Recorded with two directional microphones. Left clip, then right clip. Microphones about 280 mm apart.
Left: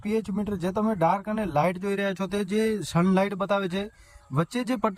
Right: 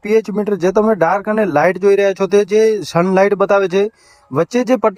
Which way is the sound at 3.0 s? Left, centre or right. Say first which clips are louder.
Right 13 dB; right.